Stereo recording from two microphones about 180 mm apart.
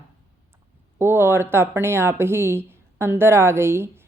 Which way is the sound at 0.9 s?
15° right (ahead or behind).